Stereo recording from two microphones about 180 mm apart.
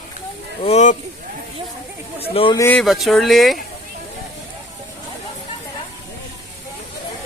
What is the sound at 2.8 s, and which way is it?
Speech, centre (ahead or behind).